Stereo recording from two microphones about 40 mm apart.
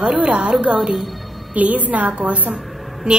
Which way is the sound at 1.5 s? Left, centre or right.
Right.